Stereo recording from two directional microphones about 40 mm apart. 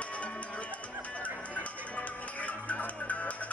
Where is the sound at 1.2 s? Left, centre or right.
Left.